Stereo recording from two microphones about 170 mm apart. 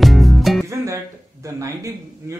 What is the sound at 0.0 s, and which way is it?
Music, centre (ahead or behind).